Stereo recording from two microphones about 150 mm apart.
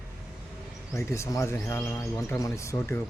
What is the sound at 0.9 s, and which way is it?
Speech, 20° left (ahead or behind).